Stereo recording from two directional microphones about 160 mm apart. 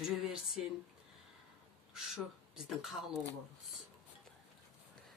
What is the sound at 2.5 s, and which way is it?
Speech, centre (ahead or behind).